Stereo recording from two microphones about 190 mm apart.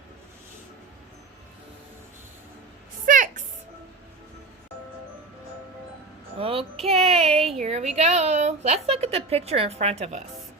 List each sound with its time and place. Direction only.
3.1 s music: 45° right (ahead or behind)
6.4 s a sound: 30° right (ahead or behind)
7.6 s a woman's voice: 35° right (ahead or behind)